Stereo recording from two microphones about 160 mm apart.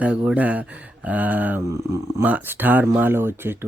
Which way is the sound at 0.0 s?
10° right (ahead or behind).